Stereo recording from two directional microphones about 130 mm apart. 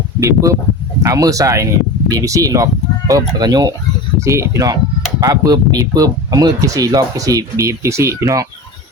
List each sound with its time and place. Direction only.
0.2 s speech: 20° right (ahead or behind)